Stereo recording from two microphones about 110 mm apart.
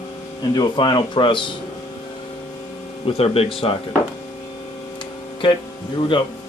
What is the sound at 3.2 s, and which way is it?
Speech, 60° left (ahead or behind).